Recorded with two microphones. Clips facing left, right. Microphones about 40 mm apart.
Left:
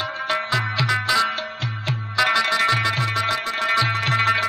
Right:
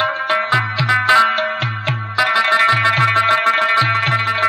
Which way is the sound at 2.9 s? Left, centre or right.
Right.